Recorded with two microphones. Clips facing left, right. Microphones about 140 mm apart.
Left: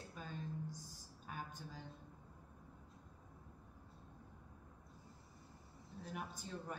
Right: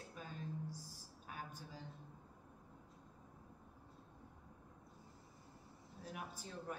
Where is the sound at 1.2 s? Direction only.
5° right (ahead or behind).